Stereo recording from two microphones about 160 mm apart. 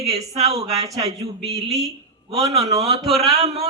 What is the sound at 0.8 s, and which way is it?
Speech, 20° right (ahead or behind).